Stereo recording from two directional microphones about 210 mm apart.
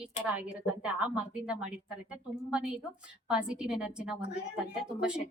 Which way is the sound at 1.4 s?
5° right (ahead or behind).